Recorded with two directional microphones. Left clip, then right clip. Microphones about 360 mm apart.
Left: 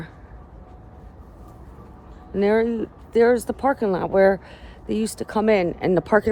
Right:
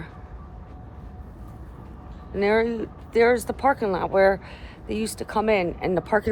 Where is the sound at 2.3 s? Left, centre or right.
Left.